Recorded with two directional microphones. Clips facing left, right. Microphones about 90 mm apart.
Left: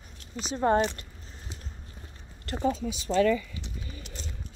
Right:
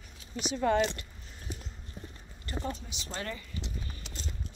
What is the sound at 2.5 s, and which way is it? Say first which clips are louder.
Speech: left 3 dB; 65° left (ahead or behind).